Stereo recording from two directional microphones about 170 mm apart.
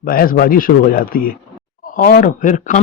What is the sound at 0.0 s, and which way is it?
A man's voice, 55° left (ahead or behind).